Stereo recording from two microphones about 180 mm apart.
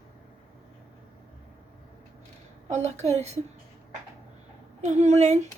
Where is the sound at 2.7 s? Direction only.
40° right (ahead or behind).